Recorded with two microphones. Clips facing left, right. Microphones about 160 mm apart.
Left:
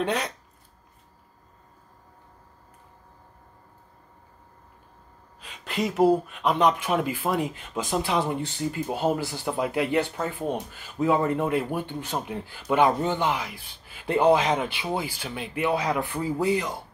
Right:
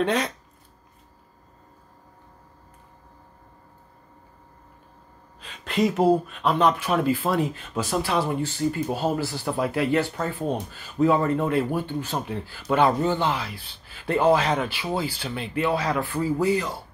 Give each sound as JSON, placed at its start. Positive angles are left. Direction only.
{"t": 0.0, "sound": "speech", "side_deg": 10}
{"t": 5.4, "sound": "speech", "side_deg": 10}